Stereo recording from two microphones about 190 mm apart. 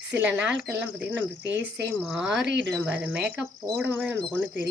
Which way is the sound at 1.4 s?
65° right (ahead or behind).